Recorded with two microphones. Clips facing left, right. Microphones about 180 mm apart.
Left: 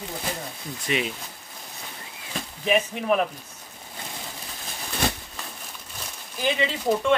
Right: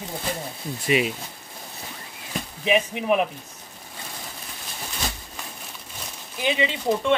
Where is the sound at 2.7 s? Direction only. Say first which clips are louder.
Right 1 dB; 5° right (ahead or behind).